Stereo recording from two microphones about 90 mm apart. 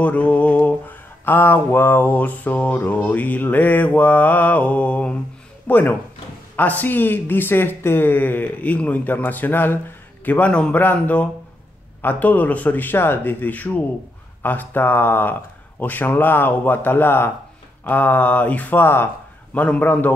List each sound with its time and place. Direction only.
0.0 s mantra: 15° left (ahead or behind)
5.7 s speech: 20° left (ahead or behind)
19.5 s mantra: 15° left (ahead or behind)